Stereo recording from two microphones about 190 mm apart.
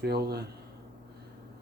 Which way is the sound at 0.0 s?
55° right (ahead or behind).